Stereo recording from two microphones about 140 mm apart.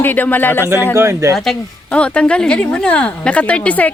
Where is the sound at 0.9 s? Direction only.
20° right (ahead or behind).